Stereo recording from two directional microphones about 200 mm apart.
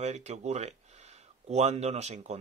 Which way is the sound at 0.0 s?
35° right (ahead or behind).